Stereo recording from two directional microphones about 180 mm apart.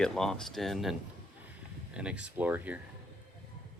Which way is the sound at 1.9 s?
5° right (ahead or behind).